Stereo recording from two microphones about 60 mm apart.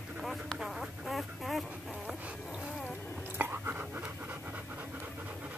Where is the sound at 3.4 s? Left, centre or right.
Right.